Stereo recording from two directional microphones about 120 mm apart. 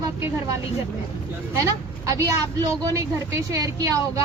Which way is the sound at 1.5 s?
25° right (ahead or behind).